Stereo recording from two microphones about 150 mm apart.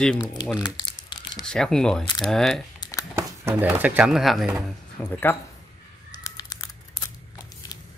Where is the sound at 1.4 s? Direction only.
5° left (ahead or behind).